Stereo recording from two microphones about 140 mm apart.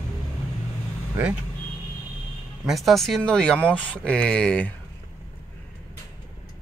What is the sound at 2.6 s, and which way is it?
Speech, centre (ahead or behind).